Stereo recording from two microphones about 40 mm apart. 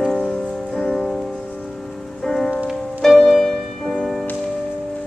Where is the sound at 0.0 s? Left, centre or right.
Centre.